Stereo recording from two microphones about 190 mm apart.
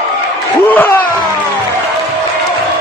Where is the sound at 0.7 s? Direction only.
10° left (ahead or behind).